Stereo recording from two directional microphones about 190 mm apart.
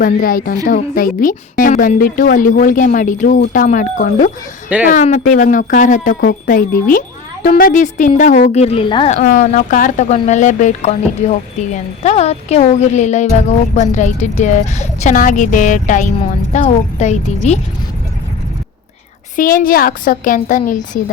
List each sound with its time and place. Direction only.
0.0 s a woman's voice: 50° left (ahead or behind)
6.1 s a woman's voice: 55° left (ahead or behind); by 17.6 s 35° left (ahead or behind)
19.4 s a woman's voice: 45° left (ahead or behind)